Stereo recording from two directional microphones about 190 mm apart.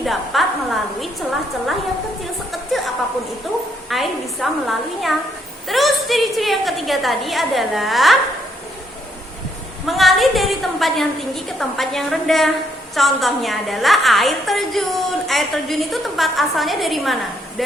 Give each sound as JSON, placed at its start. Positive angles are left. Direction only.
{"t": 0.0, "sound": "a woman's voice", "side_deg": 0}
{"t": 2.5, "sound": "a sound", "side_deg": 0}
{"t": 3.8, "sound": "a woman's voice", "side_deg": 0}
{"t": 9.8, "sound": "a woman's voice", "side_deg": 0}